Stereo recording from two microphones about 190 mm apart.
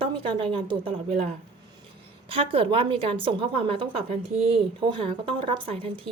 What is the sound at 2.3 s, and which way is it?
A woman's voice, 30° right (ahead or behind).